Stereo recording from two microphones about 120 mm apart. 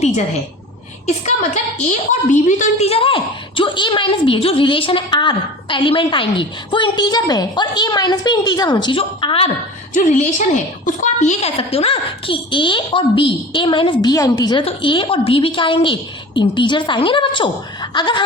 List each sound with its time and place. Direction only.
1.0 s a woman's voice: 70° left (ahead or behind)
2.1 s a woman's voice: 85° left; by 3.2 s 50° left (ahead or behind)
3.6 s a woman's voice: 40° left (ahead or behind)
9.9 s a woman's voice: 90° left; by 14.1 s 45° left (ahead or behind)
14.1 s a woman's voice: 30° left (ahead or behind)
14.6 s a woman's voice: 45° left (ahead or behind)